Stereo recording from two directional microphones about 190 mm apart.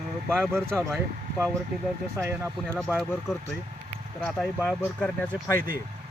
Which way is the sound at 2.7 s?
Centre (ahead or behind).